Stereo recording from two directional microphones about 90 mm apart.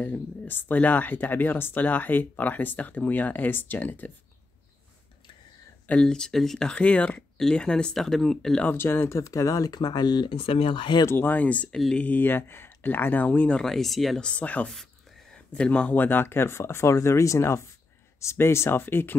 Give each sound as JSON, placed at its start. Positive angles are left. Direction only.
{"t": 0.0, "sound": "speech", "side_deg": 20}
{"t": 5.9, "sound": "speech", "side_deg": 10}
{"t": 8.6, "sound": "speech", "side_deg": 25}
{"t": 9.2, "sound": "speech", "side_deg": 40}
{"t": 9.8, "sound": "speech", "side_deg": 55}
{"t": 10.3, "sound": "speech", "side_deg": 90}
{"t": 11.1, "sound": "speech", "side_deg": 20}
{"t": 13.6, "sound": "speech", "side_deg": 5}
{"t": 14.7, "sound": "speech", "side_deg": 5}